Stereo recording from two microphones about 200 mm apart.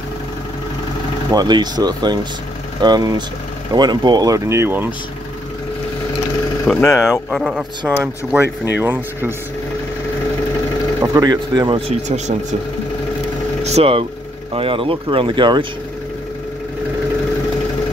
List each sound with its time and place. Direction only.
1.3 s speech: 20° right (ahead or behind)
6.7 s speech: 15° left (ahead or behind)
7.2 s speech: centre (ahead or behind)
7.9 s speech: 10° right (ahead or behind)
11.0 s speech: 20° right (ahead or behind)
13.7 s speech: 30° right (ahead or behind)